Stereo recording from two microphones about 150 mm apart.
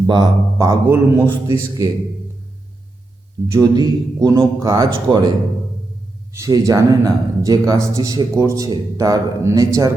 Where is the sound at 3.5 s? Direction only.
25° right (ahead or behind).